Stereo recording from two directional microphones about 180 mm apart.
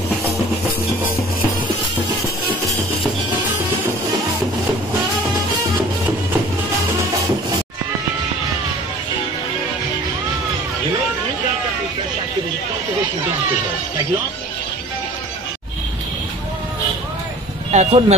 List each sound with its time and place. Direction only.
17.6 s vehicle: 35° right (ahead or behind)